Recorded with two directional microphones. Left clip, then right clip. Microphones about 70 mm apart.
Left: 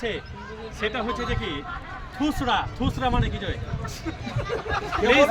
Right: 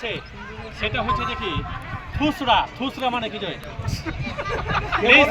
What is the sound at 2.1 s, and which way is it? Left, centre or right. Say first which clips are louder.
Speech: right 5 dB; left.